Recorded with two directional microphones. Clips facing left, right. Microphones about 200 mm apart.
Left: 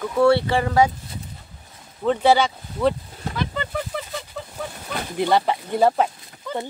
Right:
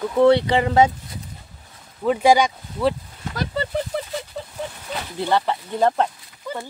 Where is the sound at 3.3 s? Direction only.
40° right (ahead or behind).